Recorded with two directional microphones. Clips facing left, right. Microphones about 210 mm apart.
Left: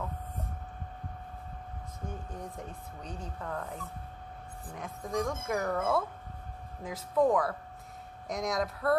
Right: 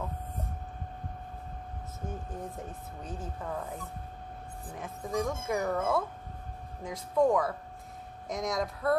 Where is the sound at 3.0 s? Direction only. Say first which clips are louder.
Right 2 dB; 5° right (ahead or behind).